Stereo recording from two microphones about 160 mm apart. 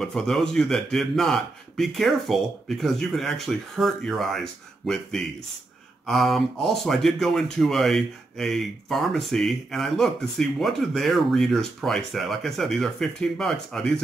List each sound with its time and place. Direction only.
0.0 s speech: centre (ahead or behind)